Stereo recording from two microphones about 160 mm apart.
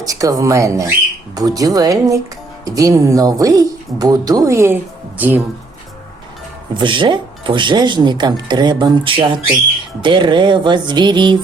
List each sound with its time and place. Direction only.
0.0 s speech: 20° right (ahead or behind)
6.7 s speech: 30° right (ahead or behind)